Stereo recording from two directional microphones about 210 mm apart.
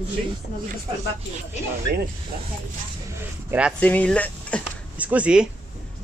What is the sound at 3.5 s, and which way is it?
Speech, 5° right (ahead or behind).